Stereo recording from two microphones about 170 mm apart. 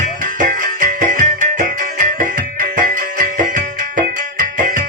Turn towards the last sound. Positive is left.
turn(degrees=-50)  # may be behind; listen again after turning